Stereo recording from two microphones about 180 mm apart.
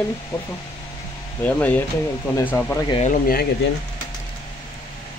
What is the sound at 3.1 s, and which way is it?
Speech, 55° left (ahead or behind).